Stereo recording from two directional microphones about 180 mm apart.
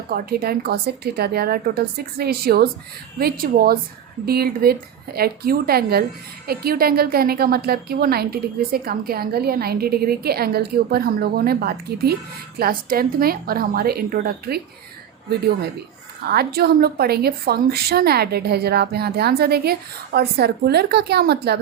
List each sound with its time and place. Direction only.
0.1 s a woman's voice: 55° right (ahead or behind)
16.3 s a woman's voice: 60° right (ahead or behind)